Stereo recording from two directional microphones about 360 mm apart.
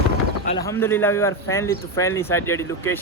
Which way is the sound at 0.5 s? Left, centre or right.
Centre.